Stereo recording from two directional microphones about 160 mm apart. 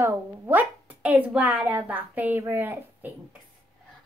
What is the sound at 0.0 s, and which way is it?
Speech, 10° right (ahead or behind).